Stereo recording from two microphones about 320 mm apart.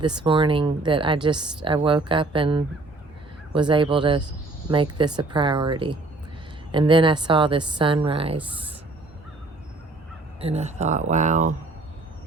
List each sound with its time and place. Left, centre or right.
0.0 s a woman's voice: centre
10.4 s speech: right